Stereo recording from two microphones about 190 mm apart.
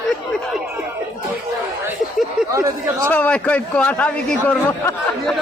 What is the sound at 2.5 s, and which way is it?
Speech, 15° right (ahead or behind).